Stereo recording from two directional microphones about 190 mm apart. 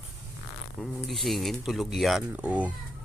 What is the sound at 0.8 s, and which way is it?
Speech, centre (ahead or behind).